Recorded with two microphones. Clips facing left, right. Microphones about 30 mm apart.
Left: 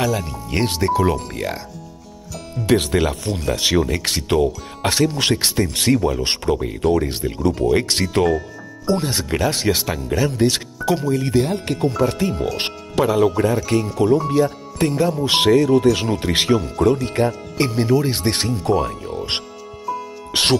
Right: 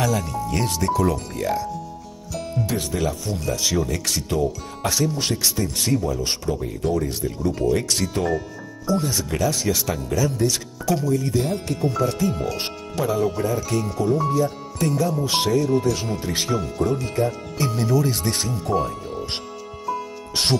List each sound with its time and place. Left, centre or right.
0.0 s speech: left
0.6 s speech: left
1.1 s speech: left
2.6 s speech: left
5.3 s speech: left
8.8 s speech: left
14.9 s speech: left
15.2 s speech: left
17.7 s speech: left
18.6 s speech: left